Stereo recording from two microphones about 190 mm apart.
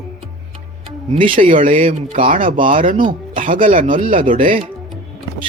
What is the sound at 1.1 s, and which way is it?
Speech, 25° right (ahead or behind).